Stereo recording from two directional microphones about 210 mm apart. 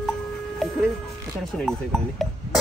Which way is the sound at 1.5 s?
Centre (ahead or behind).